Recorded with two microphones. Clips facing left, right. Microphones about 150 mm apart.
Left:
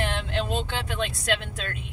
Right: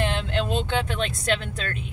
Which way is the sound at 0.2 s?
20° right (ahead or behind).